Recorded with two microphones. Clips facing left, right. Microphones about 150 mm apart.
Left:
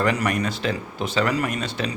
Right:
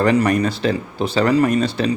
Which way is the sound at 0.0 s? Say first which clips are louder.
Right 7 dB; 35° right (ahead or behind).